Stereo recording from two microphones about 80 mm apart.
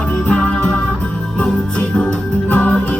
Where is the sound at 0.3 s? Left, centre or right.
Centre.